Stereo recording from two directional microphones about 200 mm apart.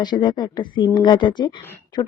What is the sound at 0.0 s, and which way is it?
Speech, 20° left (ahead or behind).